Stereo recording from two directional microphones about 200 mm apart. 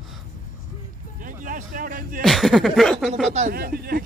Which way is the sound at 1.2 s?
40° right (ahead or behind).